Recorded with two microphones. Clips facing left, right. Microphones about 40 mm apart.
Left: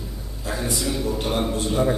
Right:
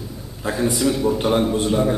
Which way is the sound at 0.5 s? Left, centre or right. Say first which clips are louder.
Right 6 dB; centre.